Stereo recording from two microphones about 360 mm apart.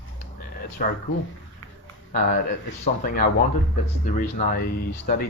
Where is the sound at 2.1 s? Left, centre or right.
Left.